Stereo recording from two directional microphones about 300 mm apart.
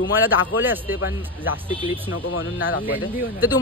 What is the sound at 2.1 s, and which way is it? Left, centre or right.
Speech, left.